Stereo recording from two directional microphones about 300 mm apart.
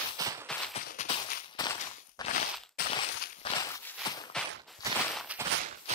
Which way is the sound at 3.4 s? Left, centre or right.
Centre.